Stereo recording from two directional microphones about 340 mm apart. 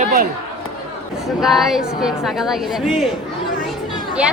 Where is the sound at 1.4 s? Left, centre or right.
Centre.